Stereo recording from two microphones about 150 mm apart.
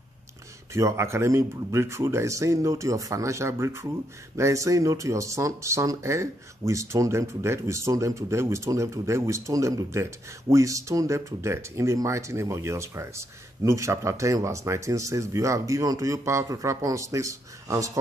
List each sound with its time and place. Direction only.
0.7 s speech: 20° right (ahead or behind)